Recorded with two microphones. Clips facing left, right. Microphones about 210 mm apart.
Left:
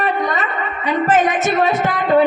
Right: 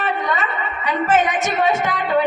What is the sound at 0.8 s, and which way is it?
A man's voice, 35° left (ahead or behind).